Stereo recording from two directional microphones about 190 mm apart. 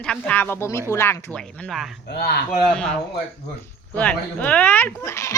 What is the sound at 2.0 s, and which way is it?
Speech, 60° left (ahead or behind).